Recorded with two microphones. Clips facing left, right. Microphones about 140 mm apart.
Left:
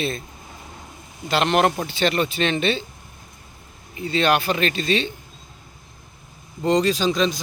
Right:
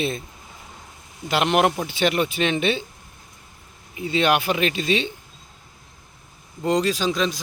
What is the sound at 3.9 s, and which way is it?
Speech, 15° right (ahead or behind).